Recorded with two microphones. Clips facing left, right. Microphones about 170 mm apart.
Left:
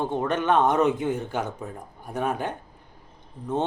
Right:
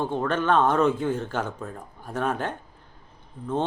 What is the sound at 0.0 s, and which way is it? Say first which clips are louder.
Speech: even; 20° left (ahead or behind).